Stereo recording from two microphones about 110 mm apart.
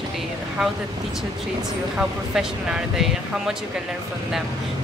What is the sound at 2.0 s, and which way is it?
Speech, 5° right (ahead or behind).